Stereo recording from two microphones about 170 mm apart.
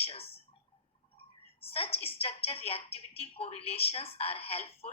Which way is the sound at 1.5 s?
35° left (ahead or behind).